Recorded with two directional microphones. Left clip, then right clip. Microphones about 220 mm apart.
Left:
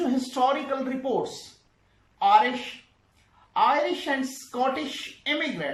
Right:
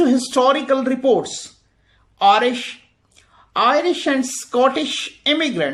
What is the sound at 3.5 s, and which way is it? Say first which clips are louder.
Speech: right 6 dB; 45° right (ahead or behind).